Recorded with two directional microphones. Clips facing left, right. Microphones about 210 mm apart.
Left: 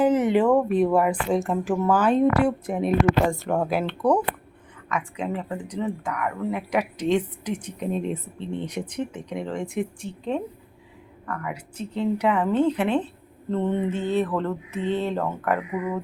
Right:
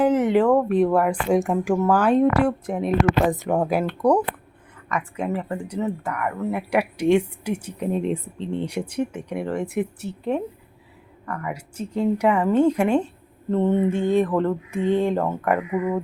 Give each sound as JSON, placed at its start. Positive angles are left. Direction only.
{"t": 0.0, "sound": "a sound", "side_deg": 5}
{"t": 0.3, "sound": "speech", "side_deg": 5}
{"t": 1.3, "sound": "speech", "side_deg": -15}
{"t": 1.7, "sound": "speech", "side_deg": 5}
{"t": 3.3, "sound": "speech", "side_deg": -15}
{"t": 3.6, "sound": "speech", "side_deg": 0}